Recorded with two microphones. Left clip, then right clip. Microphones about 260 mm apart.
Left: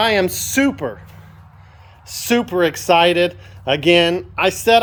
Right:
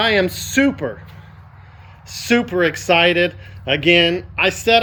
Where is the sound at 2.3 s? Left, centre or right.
Centre.